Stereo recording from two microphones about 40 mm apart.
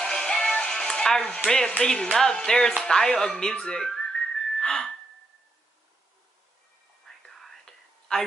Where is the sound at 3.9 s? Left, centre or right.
Centre.